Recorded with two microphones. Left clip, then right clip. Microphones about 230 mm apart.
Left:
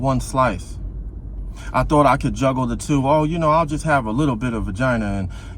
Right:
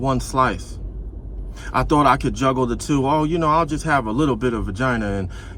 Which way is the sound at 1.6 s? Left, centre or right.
Left.